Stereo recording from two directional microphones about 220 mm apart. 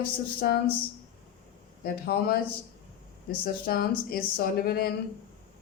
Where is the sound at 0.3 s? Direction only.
45° left (ahead or behind).